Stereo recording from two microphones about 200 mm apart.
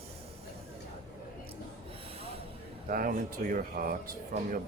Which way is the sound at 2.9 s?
45° right (ahead or behind).